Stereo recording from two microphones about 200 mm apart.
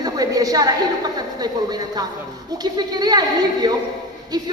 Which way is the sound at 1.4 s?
20° right (ahead or behind).